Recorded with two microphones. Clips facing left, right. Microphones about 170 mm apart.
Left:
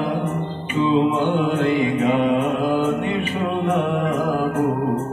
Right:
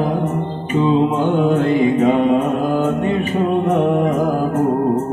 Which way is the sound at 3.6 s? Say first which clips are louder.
Right 4 dB; 45° right (ahead or behind).